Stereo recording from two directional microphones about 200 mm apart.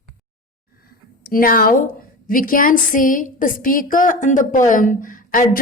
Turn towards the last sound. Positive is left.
turn(degrees=45)  # may be behind; listen again after turning